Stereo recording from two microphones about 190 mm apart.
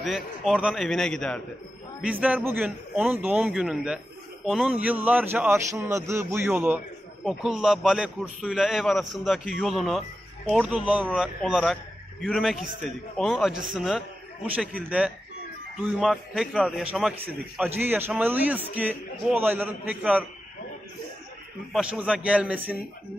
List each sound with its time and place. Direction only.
0.0 s a man's voice: centre (ahead or behind)
21.7 s a man's voice: 5° right (ahead or behind)